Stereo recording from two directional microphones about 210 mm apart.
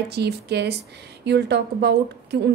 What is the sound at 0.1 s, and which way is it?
A woman's voice, 50° right (ahead or behind).